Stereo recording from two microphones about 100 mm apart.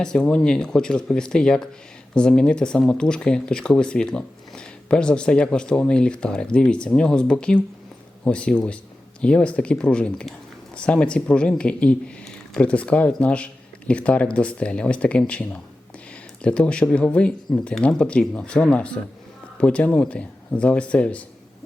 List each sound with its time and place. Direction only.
0.0 s speech: 5° left (ahead or behind)